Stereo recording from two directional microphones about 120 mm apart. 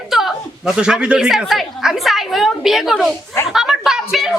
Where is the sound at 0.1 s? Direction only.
Centre (ahead or behind).